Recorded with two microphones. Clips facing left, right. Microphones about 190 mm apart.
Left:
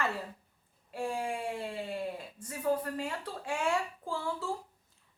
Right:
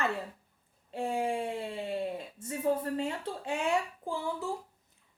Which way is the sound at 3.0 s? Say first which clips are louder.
Right 3 dB; 20° right (ahead or behind).